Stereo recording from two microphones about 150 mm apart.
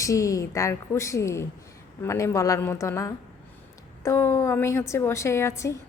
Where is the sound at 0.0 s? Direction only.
20° left (ahead or behind).